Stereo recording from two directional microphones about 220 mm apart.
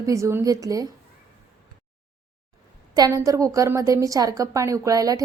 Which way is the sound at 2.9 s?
15° right (ahead or behind).